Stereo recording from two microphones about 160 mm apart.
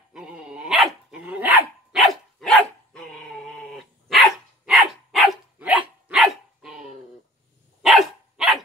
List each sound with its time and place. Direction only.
0.1 s dog: 5° right (ahead or behind)